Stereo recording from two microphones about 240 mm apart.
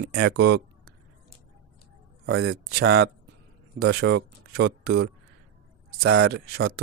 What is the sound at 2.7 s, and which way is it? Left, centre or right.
Speech, right.